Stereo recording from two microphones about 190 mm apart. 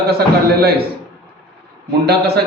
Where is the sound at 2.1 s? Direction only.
60° right (ahead or behind).